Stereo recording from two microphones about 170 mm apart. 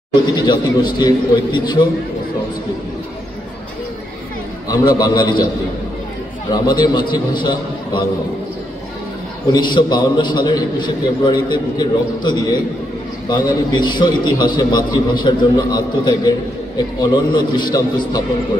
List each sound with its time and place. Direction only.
0.4 s a man's voice: 25° left (ahead or behind)
4.6 s a man's voice: 20° left (ahead or behind)
6.5 s a man's voice: 25° left (ahead or behind)
9.5 s a man's voice: 25° left (ahead or behind)